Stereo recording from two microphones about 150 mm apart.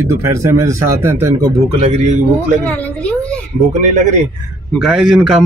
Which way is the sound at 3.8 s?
55° right (ahead or behind).